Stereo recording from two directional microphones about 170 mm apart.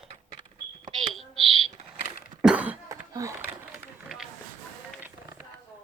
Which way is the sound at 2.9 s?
20° right (ahead or behind).